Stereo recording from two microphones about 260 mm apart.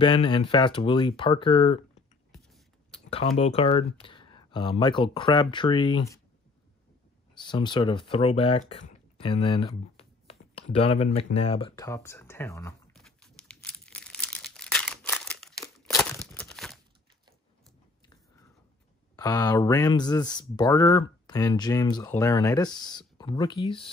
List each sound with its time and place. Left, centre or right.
0.0 s speech: centre
2.9 s speech: left
7.3 s a sound: centre
15.6 s crumpling: centre
16.3 s a sound: centre
19.1 s speech: centre